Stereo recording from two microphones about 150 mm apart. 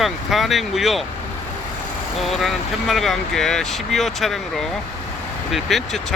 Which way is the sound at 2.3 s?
Centre (ahead or behind).